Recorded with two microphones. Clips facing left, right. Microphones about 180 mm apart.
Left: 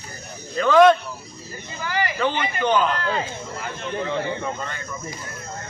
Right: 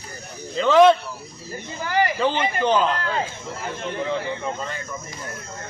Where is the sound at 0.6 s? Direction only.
25° right (ahead or behind).